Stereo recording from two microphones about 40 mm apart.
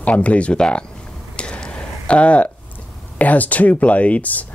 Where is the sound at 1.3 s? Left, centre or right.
Left.